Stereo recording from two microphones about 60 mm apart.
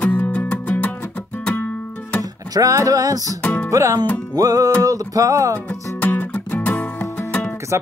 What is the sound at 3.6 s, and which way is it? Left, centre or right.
Music, right.